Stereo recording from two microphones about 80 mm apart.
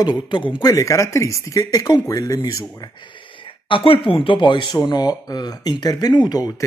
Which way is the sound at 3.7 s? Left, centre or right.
Left.